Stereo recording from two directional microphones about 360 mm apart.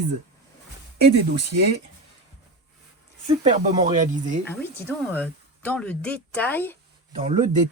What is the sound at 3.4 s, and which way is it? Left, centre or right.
Speech, centre.